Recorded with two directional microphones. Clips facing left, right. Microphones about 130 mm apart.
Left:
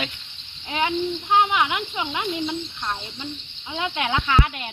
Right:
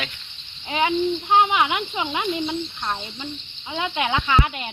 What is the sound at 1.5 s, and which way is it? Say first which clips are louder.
Speech: right 1 dB; 5° right (ahead or behind).